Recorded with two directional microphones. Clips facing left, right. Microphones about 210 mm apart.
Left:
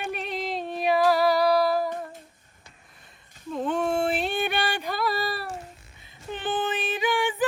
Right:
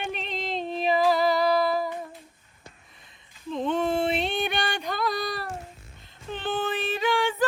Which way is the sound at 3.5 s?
5° left (ahead or behind).